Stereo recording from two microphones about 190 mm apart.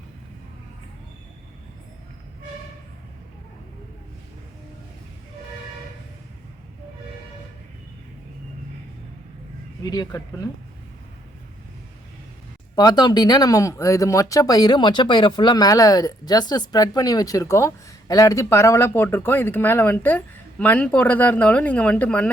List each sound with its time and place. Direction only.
9.8 s speech: 20° left (ahead or behind)
12.7 s speech: 20° left (ahead or behind)